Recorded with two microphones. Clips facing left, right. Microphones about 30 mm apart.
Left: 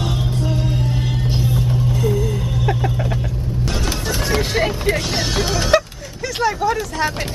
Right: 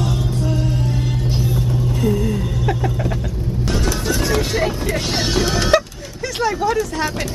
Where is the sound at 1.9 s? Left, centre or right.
Centre.